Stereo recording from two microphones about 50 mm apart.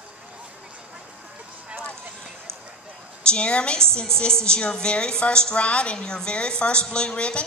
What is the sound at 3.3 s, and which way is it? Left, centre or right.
A woman's voice, left.